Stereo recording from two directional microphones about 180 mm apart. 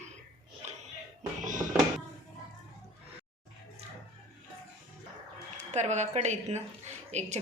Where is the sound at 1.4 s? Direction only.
45° right (ahead or behind).